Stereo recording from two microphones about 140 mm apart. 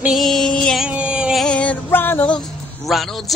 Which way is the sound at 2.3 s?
Centre (ahead or behind).